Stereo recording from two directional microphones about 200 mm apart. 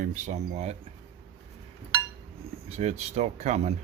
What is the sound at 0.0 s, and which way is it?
Speech, 40° right (ahead or behind).